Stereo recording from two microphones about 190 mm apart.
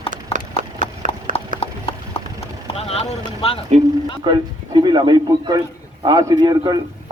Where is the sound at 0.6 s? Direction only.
45° right (ahead or behind).